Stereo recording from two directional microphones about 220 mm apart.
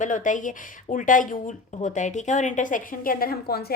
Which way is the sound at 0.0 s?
35° left (ahead or behind).